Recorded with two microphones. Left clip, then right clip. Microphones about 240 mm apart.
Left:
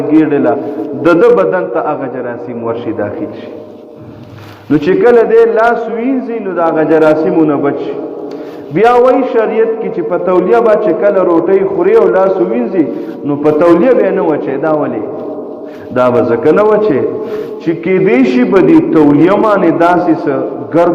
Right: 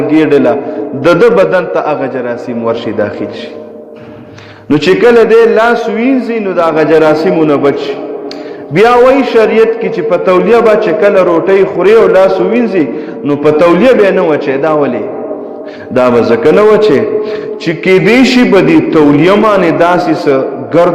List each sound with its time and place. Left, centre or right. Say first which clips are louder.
0.1 s a man's voice: right 2 dB; right
4.7 s a man's voice: right 2 dB; right
16.0 s a man's voice: right 2 dB; right